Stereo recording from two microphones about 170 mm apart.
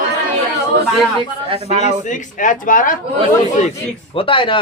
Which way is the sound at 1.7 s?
40° left (ahead or behind).